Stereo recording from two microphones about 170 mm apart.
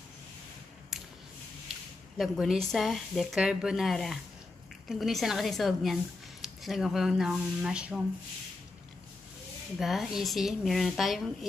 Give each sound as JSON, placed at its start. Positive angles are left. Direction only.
{"t": 2.1, "sound": "speech", "side_deg": 0}
{"t": 9.8, "sound": "speech", "side_deg": 0}